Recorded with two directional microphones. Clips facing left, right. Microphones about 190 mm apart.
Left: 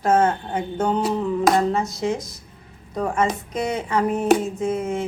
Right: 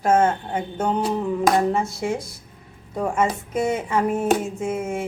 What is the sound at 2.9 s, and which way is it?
Speech, 10° right (ahead or behind).